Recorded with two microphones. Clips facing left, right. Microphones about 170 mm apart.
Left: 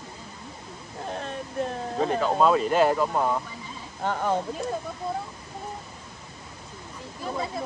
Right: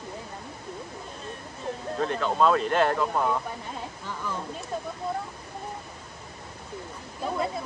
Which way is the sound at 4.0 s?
65° left (ahead or behind).